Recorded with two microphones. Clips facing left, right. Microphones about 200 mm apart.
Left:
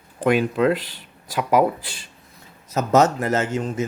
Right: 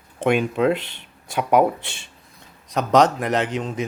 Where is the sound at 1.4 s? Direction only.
5° left (ahead or behind).